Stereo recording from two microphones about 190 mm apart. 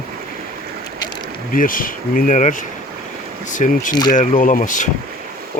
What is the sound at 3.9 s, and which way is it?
Speech, 20° left (ahead or behind).